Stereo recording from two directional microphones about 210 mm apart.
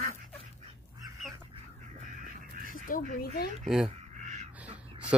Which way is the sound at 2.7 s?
40° left (ahead or behind).